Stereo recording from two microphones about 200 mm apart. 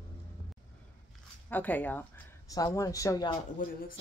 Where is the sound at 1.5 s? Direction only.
10° left (ahead or behind).